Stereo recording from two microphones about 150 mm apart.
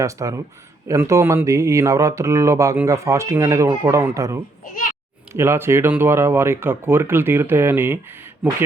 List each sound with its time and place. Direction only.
0.0 s speech: 20° right (ahead or behind)
4.6 s a sound: 65° left (ahead or behind)
5.3 s speech: 15° right (ahead or behind)